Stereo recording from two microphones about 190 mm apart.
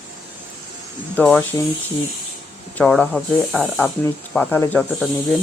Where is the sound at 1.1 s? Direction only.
10° left (ahead or behind).